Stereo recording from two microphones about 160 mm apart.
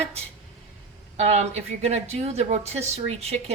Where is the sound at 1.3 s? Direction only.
45° right (ahead or behind).